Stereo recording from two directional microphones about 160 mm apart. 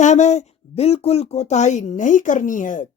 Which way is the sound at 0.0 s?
45° left (ahead or behind).